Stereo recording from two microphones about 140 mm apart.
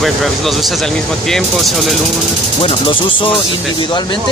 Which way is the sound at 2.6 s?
40° left (ahead or behind).